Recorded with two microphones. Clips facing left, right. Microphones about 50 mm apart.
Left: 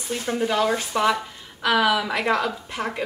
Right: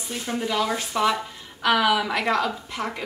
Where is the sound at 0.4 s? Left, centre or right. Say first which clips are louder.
Left 3 dB; left.